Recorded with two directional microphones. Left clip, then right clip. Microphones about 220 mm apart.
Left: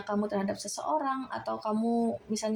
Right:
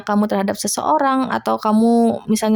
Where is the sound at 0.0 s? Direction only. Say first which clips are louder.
Right 12 dB; 35° right (ahead or behind).